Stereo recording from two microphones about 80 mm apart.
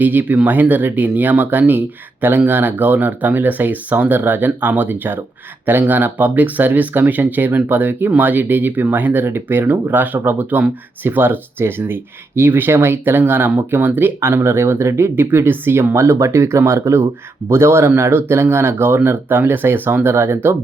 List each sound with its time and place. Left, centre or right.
0.0 s speech: right